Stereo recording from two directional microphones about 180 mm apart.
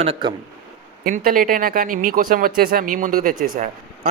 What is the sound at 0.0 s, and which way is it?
Speech, 30° right (ahead or behind).